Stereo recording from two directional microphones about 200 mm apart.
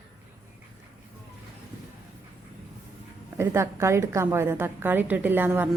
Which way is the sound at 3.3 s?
15° right (ahead or behind).